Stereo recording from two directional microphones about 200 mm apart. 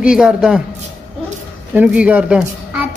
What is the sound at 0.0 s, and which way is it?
Speech, 5° right (ahead or behind).